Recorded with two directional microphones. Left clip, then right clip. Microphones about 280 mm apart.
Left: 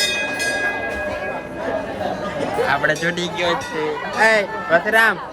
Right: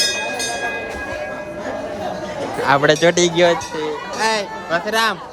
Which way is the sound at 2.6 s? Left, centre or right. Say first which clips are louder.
Right 7 dB; right.